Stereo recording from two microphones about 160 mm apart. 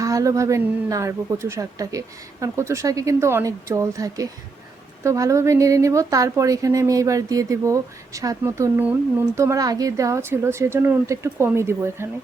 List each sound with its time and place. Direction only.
0.0 s a woman's voice: 20° right (ahead or behind)